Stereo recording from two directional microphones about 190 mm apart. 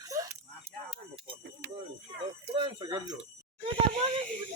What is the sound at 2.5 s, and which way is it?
Speech, 25° right (ahead or behind).